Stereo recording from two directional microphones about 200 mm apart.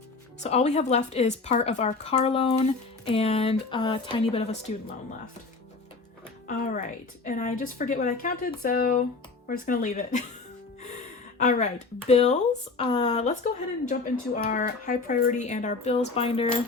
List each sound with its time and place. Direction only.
0.4 s speech: 35° left (ahead or behind)
6.5 s speech: 45° left (ahead or behind)
11.4 s speech: 35° left (ahead or behind)
14.3 s speech: 45° left (ahead or behind)